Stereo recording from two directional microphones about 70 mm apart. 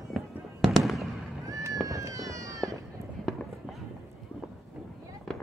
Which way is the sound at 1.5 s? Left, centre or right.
Right.